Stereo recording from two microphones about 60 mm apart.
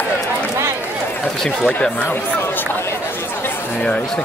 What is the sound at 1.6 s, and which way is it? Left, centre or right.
Speech, left.